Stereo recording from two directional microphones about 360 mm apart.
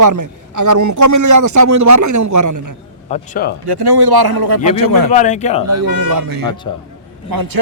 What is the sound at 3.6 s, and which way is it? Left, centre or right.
Speech, right.